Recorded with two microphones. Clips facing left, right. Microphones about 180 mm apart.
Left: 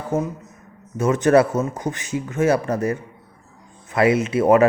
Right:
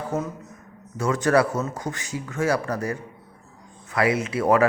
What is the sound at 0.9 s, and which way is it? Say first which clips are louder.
A man's voice: left 5 dB; 20° left (ahead or behind).